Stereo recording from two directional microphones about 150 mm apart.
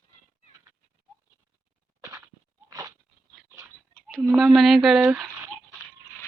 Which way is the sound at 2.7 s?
25° right (ahead or behind).